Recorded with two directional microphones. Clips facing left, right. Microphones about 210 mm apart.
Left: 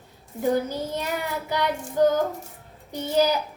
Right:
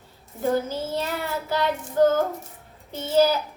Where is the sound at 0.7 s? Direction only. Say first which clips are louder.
Right 1 dB; 15° left (ahead or behind).